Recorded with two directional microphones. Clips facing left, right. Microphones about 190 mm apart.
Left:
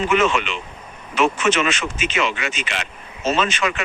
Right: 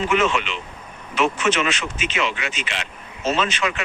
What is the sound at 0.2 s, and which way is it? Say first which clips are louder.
Speech: left 2 dB; 50° left (ahead or behind).